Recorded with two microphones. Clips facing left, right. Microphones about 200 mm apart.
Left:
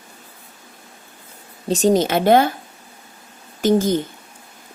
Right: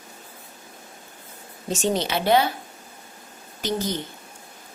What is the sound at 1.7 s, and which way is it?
Speech, 40° left (ahead or behind).